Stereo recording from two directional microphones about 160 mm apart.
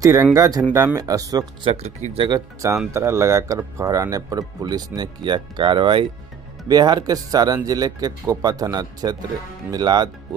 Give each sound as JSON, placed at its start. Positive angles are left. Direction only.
{"t": 0.0, "sound": "speech", "side_deg": -20}
{"t": 1.7, "sound": "speech", "side_deg": -40}
{"t": 2.1, "sound": "speech", "side_deg": -25}